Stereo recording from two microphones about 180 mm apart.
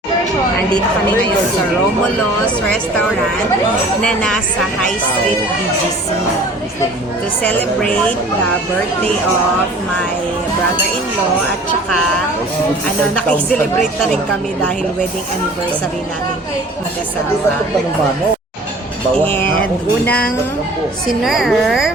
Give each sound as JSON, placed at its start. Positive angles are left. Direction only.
{"t": 4.0, "sound": "a woman's voice", "side_deg": 5}
{"t": 7.4, "sound": "a woman's voice", "side_deg": 10}
{"t": 19.2, "sound": "a woman's voice", "side_deg": 10}
{"t": 21.2, "sound": "a woman's voice", "side_deg": 0}